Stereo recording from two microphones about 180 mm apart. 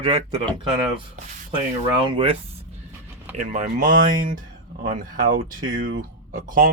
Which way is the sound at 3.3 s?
40° right (ahead or behind).